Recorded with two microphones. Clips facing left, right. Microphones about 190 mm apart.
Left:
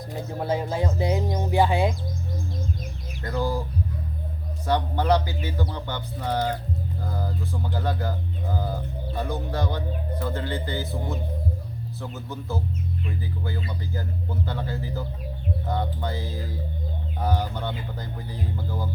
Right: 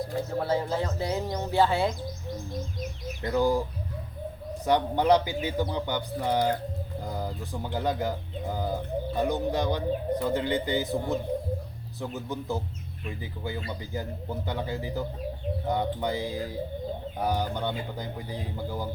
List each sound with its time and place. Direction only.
0.1 s speech: 15° left (ahead or behind)
3.3 s speech: 15° right (ahead or behind)
4.6 s speech: 15° right (ahead or behind)
9.1 s speech: 20° right (ahead or behind)